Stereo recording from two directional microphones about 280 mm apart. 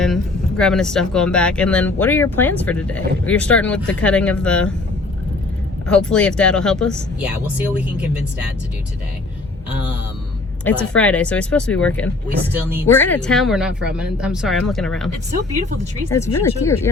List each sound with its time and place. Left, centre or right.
0.0 s speech: centre
5.9 s speech: centre
10.6 s speech: centre
12.3 s speech: right
12.9 s speech: centre
16.4 s speech: centre